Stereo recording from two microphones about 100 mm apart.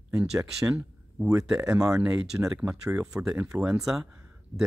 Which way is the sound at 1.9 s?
10° right (ahead or behind).